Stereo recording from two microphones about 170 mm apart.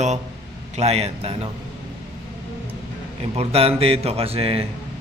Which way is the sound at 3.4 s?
35° right (ahead or behind).